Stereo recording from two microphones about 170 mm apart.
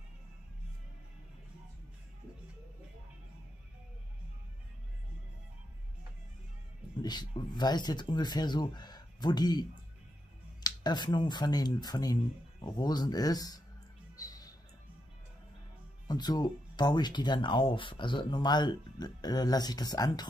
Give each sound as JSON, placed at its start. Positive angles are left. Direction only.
{"t": 7.0, "sound": "speech", "side_deg": 25}
{"t": 14.1, "sound": "music", "side_deg": 20}
{"t": 16.1, "sound": "speech", "side_deg": 25}